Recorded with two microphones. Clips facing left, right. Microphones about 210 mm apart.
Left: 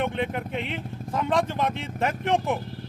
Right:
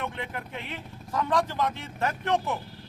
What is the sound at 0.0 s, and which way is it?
A man's voice, 25° left (ahead or behind).